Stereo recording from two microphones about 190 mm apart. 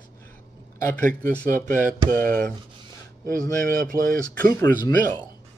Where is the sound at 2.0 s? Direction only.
45° right (ahead or behind).